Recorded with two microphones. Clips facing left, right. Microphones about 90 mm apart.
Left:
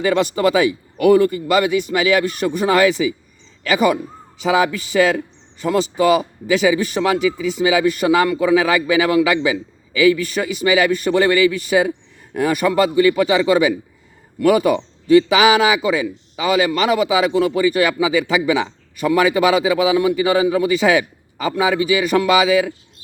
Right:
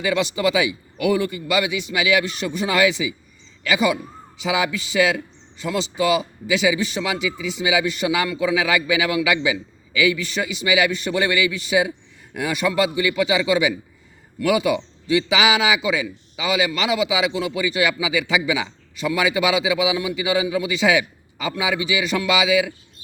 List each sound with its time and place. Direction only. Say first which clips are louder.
0.0 s a man's voice: left 4 dB; 45° left (ahead or behind)